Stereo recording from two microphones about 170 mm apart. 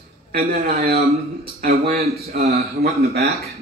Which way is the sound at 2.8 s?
65° right (ahead or behind).